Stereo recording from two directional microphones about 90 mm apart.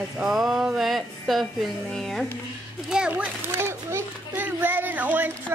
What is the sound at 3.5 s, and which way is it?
Children playing, 30° right (ahead or behind).